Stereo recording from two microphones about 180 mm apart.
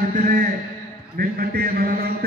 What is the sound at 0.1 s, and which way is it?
A man's voice, 50° right (ahead or behind).